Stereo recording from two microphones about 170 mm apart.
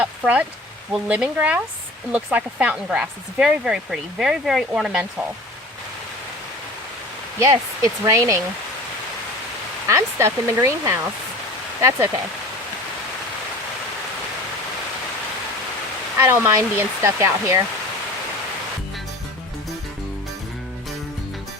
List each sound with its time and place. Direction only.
0.9 s speech: 5° right (ahead or behind)
7.3 s speech: 20° right (ahead or behind)
9.8 s speech: 15° right (ahead or behind)
16.1 s speech: 15° right (ahead or behind)